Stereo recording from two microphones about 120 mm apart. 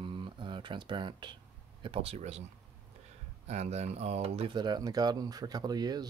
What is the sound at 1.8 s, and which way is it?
Speech, 55° right (ahead or behind).